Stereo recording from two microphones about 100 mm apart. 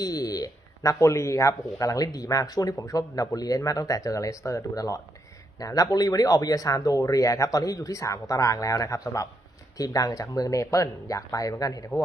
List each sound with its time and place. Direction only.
0.0 s speech: 40° left (ahead or behind)